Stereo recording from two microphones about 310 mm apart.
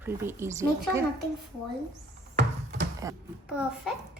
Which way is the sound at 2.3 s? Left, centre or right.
Right.